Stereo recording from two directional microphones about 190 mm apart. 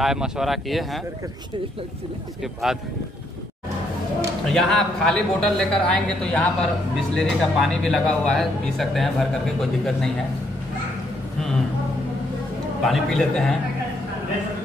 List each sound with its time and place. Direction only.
0.0 s speech: centre (ahead or behind)
2.4 s speech: centre (ahead or behind)
4.5 s speech: centre (ahead or behind)
12.8 s speech: centre (ahead or behind)